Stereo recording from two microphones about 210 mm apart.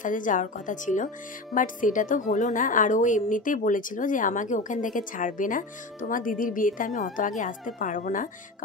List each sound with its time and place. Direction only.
0.0 s speech: 40° left (ahead or behind)